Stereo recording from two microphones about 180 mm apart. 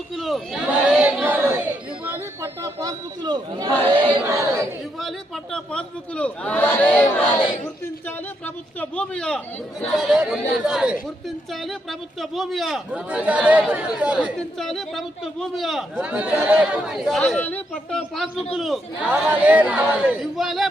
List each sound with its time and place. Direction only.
0.2 s chatter: centre (ahead or behind)
2.0 s a man's voice: 15° right (ahead or behind)
4.9 s a man's voice: centre (ahead or behind)